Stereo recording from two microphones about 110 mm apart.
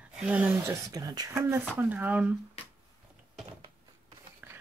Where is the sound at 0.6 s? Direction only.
25° right (ahead or behind).